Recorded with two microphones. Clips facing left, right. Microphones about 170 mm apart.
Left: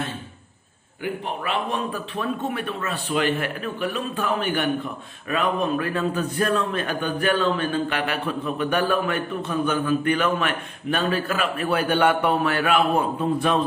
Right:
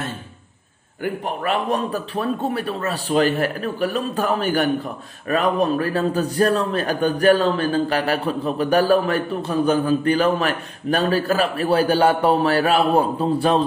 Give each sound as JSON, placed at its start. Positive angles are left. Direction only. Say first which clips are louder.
{"t": 1.0, "sound": "a man's voice", "louder": "right 4 dB", "side_deg": -45}